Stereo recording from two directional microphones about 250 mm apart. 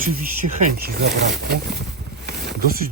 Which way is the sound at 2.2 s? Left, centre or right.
Right.